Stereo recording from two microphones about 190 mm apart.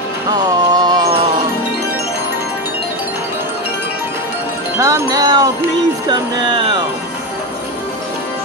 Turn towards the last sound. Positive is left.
turn(degrees=-25)  # may be behind; listen again after turning